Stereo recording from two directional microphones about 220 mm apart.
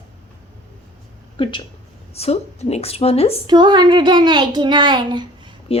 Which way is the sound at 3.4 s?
20° right (ahead or behind).